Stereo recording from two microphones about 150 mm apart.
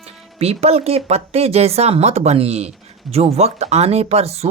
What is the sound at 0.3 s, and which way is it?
Speech, 45° right (ahead or behind).